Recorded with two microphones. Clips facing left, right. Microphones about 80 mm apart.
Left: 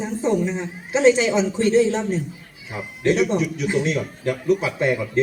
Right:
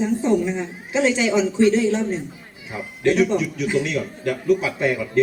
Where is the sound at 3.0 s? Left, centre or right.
Left.